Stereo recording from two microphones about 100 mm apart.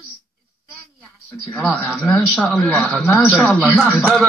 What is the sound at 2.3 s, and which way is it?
Speech, centre (ahead or behind).